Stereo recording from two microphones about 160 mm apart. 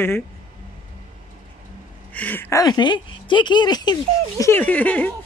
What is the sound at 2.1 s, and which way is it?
Speech, 10° left (ahead or behind).